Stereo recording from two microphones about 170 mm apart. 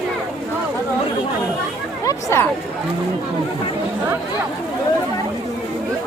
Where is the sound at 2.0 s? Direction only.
15° left (ahead or behind).